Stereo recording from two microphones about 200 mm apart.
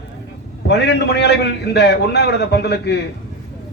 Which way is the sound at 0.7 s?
60° left (ahead or behind).